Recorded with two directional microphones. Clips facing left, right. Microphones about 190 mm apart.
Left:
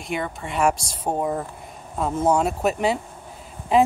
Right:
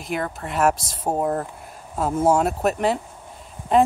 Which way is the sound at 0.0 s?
Centre (ahead or behind).